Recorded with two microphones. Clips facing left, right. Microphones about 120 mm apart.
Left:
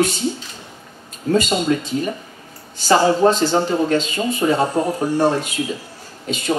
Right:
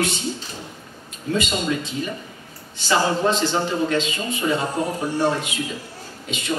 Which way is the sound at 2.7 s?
40° left (ahead or behind).